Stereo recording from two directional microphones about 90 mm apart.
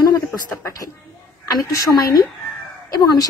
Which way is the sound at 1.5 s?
45° left (ahead or behind).